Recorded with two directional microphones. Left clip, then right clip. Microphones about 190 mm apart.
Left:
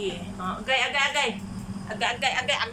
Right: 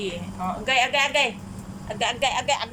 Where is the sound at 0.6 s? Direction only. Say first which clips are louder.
Right 3 dB; 20° right (ahead or behind).